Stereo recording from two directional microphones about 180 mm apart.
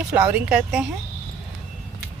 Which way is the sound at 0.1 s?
10° right (ahead or behind).